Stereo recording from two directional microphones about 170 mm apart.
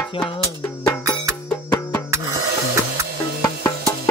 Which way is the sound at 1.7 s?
20° left (ahead or behind).